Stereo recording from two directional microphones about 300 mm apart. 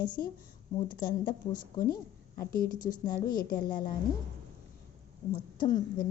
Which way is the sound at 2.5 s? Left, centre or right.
Left.